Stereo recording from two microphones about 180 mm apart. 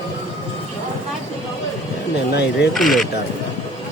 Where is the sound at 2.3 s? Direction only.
70° left (ahead or behind).